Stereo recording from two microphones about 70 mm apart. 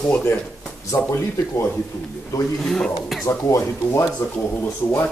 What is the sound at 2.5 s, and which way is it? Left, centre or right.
Speech, centre.